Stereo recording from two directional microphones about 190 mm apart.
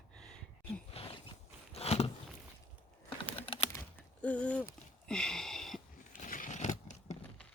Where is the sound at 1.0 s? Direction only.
30° left (ahead or behind).